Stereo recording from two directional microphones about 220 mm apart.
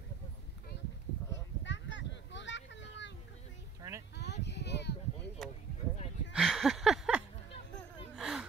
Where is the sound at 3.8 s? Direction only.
15° right (ahead or behind).